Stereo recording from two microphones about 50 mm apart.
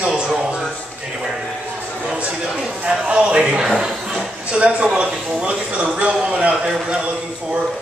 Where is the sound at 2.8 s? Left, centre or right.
Centre.